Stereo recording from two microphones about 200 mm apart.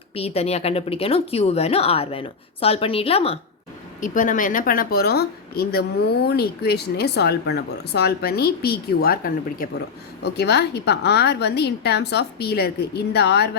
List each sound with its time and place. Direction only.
0.1 s a woman's voice: 30° left (ahead or behind)
4.0 s a woman's voice: 40° left (ahead or behind)